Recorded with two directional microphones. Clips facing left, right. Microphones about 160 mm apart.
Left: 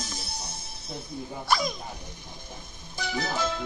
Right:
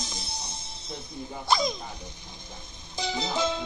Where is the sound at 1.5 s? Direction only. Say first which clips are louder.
Right 1 dB; 15° right (ahead or behind).